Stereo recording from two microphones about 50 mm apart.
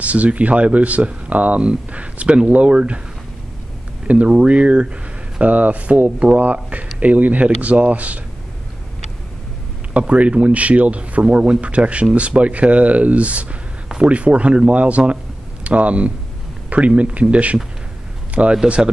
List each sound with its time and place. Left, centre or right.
0.0 s a man's voice: right
4.1 s a man's voice: right
9.9 s a man's voice: right